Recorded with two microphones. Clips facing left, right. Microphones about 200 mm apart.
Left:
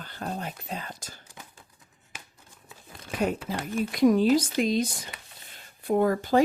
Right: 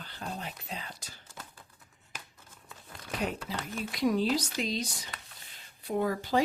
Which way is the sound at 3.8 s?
50° left (ahead or behind).